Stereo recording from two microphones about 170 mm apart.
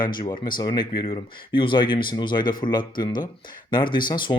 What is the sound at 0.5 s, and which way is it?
Speech, 25° left (ahead or behind).